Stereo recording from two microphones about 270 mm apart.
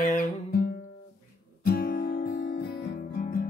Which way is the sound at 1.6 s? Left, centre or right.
Left.